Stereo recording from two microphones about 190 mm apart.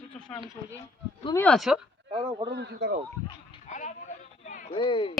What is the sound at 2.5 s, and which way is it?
Speech, 65° right (ahead or behind).